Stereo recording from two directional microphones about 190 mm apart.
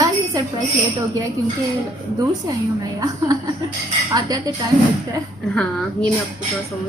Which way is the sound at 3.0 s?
20° right (ahead or behind).